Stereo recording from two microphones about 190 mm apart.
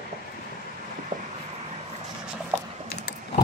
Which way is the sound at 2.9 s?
60° left (ahead or behind).